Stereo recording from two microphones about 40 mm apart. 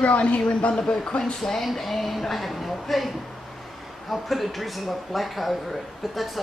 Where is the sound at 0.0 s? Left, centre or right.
Left; by 1.7 s centre.